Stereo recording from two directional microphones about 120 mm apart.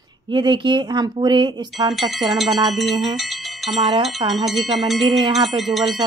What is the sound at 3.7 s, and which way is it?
Speech, 40° right (ahead or behind).